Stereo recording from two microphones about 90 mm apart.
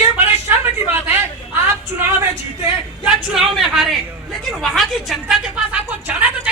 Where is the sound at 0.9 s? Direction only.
25° right (ahead or behind).